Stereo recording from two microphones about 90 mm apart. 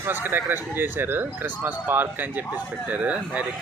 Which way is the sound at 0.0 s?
20° right (ahead or behind).